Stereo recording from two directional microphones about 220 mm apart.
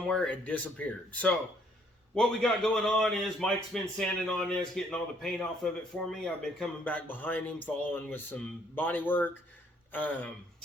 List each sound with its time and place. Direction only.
0.1 s a man's voice: 5° left (ahead or behind)